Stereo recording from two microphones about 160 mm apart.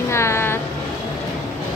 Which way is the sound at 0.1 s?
15° left (ahead or behind).